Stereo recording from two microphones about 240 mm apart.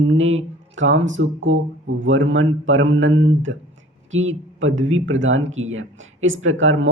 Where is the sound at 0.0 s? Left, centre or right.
Right.